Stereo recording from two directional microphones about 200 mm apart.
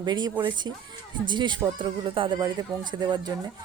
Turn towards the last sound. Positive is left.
turn(degrees=-20)  # may be behind; listen again after turning